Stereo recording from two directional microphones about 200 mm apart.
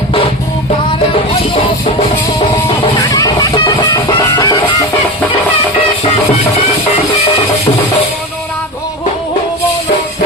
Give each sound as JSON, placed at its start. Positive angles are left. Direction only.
{"t": 2.6, "sound": "music", "side_deg": 20}